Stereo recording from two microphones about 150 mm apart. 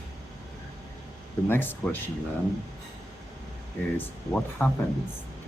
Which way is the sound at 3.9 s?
10° left (ahead or behind).